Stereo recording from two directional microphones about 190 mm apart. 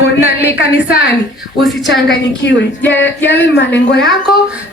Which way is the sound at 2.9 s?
70° left (ahead or behind).